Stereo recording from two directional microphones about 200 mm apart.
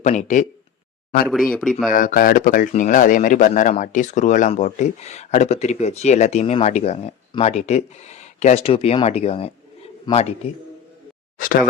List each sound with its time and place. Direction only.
0.0 s speech: 35° left (ahead or behind)
1.3 s speech: centre (ahead or behind)
1.9 s speech: 40° left (ahead or behind)
11.3 s speech: 45° left (ahead or behind)